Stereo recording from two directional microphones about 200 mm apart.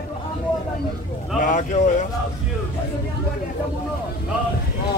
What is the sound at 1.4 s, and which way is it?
Speech, 40° left (ahead or behind).